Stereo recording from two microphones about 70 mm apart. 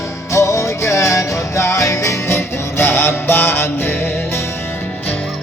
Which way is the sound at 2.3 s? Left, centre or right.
Left.